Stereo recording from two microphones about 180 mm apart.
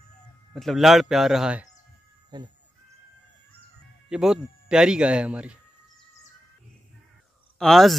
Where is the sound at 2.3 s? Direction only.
25° right (ahead or behind).